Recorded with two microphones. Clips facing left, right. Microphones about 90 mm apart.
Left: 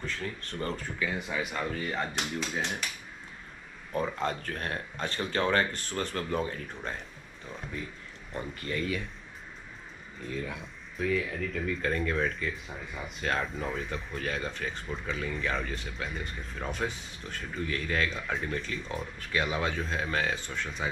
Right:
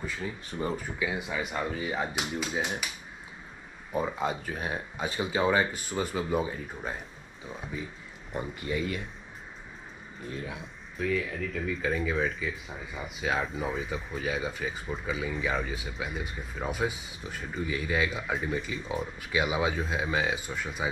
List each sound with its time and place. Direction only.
0.0 s speech: 10° right (ahead or behind)
3.9 s speech: 10° right (ahead or behind)
10.2 s speech: 25° right (ahead or behind)
11.0 s speech: centre (ahead or behind)